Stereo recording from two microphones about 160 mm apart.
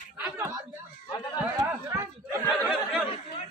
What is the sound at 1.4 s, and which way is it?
Speech, 15° right (ahead or behind).